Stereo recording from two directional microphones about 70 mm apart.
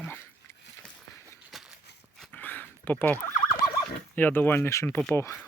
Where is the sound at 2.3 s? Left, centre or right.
Left.